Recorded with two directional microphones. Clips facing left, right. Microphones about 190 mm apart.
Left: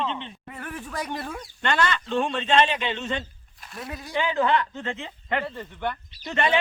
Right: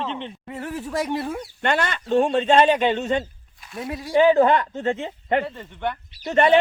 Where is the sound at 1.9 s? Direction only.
45° right (ahead or behind).